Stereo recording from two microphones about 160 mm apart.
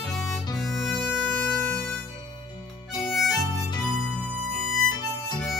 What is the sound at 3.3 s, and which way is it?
Harmonica, 25° left (ahead or behind).